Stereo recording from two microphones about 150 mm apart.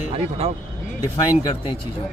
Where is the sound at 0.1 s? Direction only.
40° right (ahead or behind).